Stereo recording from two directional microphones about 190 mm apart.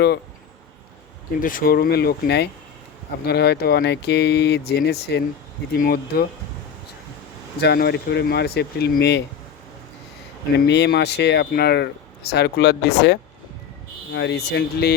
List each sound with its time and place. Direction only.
1.4 s speech: 45° left (ahead or behind)
5.7 s speech: 50° left (ahead or behind)
7.6 s speech: 60° left (ahead or behind)
10.7 s speech: 60° left (ahead or behind)